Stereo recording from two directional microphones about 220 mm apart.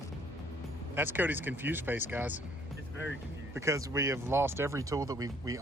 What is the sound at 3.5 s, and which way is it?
Speech, 15° right (ahead or behind).